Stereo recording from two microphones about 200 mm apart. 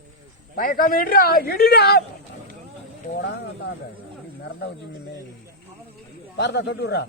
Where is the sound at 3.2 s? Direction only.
55° left (ahead or behind).